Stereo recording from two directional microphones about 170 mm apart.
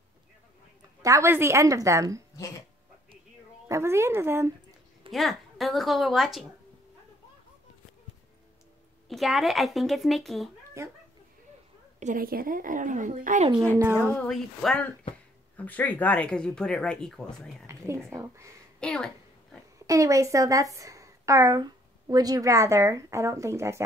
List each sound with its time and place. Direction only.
1.0 s a woman's voice: 15° right (ahead or behind)
3.6 s speech: 15° right (ahead or behind)
5.1 s speech: centre (ahead or behind)
9.1 s speech: centre (ahead or behind)
10.8 s a woman's voice: 15° right (ahead or behind)
12.0 s speech: 55° right (ahead or behind)
13.9 s speech: 10° left (ahead or behind)
17.6 s a woman's voice: 15° right (ahead or behind)
18.8 s a woman's voice: 5° left (ahead or behind)
19.9 s a woman's voice: 20° right (ahead or behind)